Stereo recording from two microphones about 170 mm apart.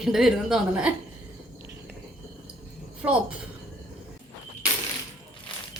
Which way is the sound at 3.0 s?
10° right (ahead or behind).